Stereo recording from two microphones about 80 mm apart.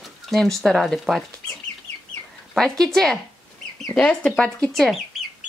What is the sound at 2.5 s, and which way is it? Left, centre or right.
Speech, centre.